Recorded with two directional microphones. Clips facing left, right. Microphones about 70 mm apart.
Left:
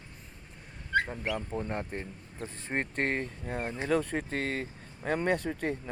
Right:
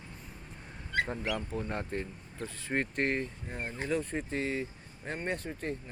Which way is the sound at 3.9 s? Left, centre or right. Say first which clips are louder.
Left 4 dB; left.